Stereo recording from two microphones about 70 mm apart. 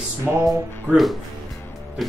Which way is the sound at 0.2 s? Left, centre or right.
Right.